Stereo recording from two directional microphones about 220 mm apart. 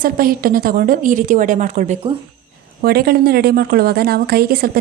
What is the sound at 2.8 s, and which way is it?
A woman's voice, 45° right (ahead or behind).